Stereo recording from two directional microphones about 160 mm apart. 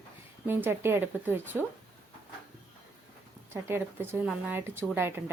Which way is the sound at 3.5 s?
15° right (ahead or behind).